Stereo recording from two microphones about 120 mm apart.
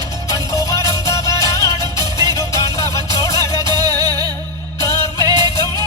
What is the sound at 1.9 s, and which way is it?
Music, 35° right (ahead or behind).